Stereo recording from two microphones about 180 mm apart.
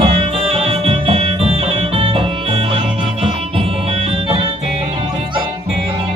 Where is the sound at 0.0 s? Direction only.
30° right (ahead or behind).